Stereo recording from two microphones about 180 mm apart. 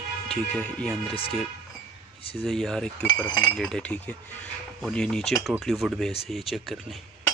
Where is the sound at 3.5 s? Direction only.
5° left (ahead or behind).